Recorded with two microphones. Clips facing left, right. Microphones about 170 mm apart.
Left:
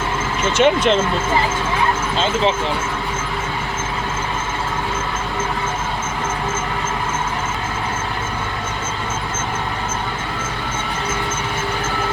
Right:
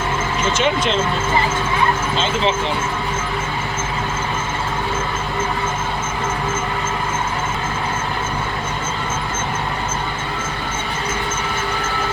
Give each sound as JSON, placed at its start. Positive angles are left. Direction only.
{"t": 0.5, "sound": "speech", "side_deg": 60}